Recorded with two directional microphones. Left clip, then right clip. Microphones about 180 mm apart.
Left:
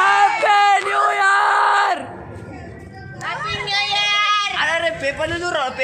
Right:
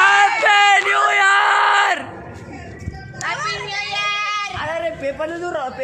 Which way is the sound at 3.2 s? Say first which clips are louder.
Right 1 dB; 15° right (ahead or behind).